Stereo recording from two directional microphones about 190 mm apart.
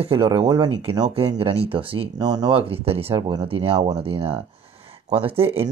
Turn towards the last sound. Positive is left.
turn(degrees=-30)  # may be behind; listen again after turning